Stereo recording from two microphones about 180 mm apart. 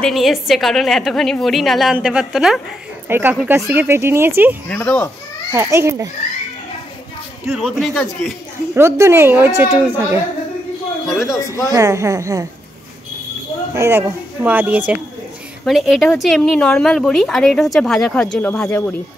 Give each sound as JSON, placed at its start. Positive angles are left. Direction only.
{"t": 0.0, "sound": "speech", "side_deg": 0}
{"t": 3.1, "sound": "speech", "side_deg": -10}
{"t": 4.6, "sound": "speech", "side_deg": 10}
{"t": 5.5, "sound": "speech", "side_deg": -15}
{"t": 7.6, "sound": "speech", "side_deg": 0}
{"t": 8.7, "sound": "speech", "side_deg": -15}
{"t": 11.2, "sound": "speech", "side_deg": 20}
{"t": 11.7, "sound": "speech", "side_deg": -15}
{"t": 13.7, "sound": "speech", "side_deg": -15}